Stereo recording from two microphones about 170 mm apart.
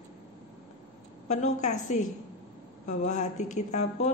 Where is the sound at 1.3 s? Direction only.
45° left (ahead or behind).